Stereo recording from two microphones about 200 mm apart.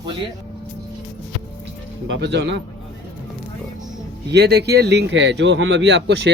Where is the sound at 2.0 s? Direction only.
65° right (ahead or behind).